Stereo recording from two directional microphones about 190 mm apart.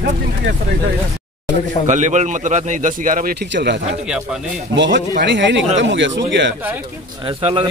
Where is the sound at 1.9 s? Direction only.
40° right (ahead or behind); by 3.8 s 65° right (ahead or behind).